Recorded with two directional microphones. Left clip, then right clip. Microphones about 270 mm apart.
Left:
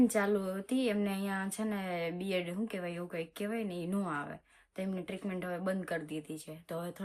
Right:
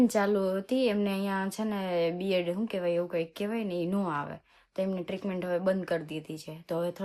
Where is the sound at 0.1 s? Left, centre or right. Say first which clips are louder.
Right 5 dB; right.